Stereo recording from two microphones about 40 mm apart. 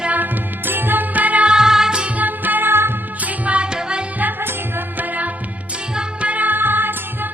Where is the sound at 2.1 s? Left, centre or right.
Right.